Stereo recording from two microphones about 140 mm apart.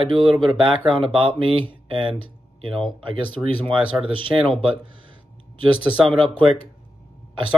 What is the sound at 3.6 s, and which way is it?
Speech, 40° right (ahead or behind).